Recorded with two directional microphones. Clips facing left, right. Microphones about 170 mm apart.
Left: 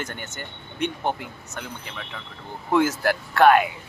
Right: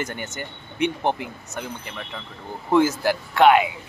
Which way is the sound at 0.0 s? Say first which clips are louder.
Right 4 dB; 10° right (ahead or behind).